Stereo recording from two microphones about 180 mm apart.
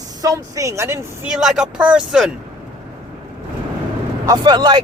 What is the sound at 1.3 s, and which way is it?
Speech, 5° right (ahead or behind).